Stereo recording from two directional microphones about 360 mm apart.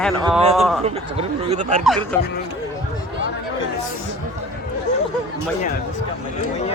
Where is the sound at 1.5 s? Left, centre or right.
Centre.